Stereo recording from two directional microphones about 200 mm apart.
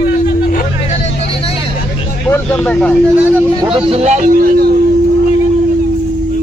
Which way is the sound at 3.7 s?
30° right (ahead or behind).